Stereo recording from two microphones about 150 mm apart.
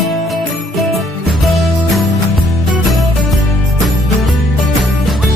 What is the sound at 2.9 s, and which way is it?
Music, centre (ahead or behind).